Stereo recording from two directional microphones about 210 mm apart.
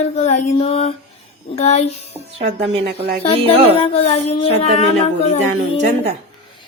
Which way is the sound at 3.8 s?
30° left (ahead or behind).